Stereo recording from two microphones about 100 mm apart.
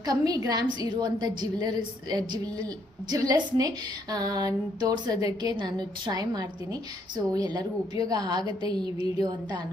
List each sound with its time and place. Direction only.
0.0 s a woman's voice: 35° right (ahead or behind)